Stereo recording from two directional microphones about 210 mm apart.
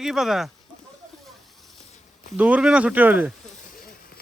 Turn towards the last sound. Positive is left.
turn(degrees=-10)  # may be behind; listen again after turning